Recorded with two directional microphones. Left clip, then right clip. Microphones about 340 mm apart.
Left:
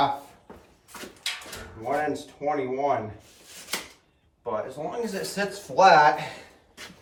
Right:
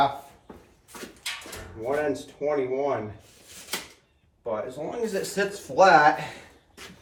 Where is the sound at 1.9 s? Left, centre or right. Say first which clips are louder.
Even; centre.